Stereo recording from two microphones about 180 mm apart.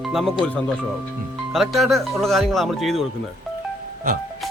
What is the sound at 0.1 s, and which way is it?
Speech, centre (ahead or behind).